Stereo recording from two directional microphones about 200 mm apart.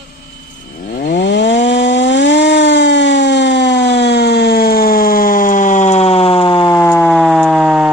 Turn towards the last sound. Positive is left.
turn(degrees=-5)  # may be behind; listen again after turning